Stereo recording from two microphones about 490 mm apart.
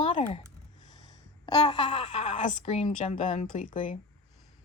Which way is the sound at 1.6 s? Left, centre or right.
Centre.